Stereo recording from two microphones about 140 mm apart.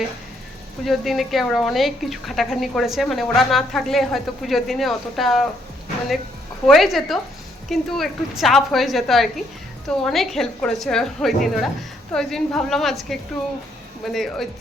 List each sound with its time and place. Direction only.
0.9 s a woman's voice: centre (ahead or behind)
6.7 s a woman's voice: centre (ahead or behind)